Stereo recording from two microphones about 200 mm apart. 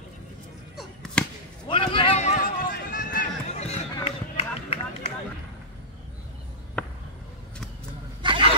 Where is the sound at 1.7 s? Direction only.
25° left (ahead or behind).